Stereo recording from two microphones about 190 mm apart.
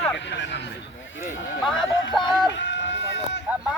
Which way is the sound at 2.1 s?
Centre (ahead or behind).